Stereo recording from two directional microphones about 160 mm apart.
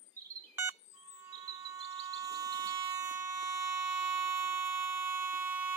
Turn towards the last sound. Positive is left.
turn(degrees=-10)  # may be behind; listen again after turning